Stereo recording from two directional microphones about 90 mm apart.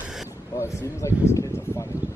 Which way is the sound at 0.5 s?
35° left (ahead or behind).